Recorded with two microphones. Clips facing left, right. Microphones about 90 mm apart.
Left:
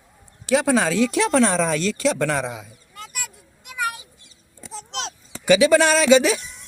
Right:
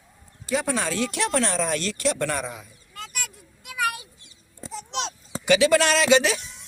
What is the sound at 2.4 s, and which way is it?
Speech, 90° left.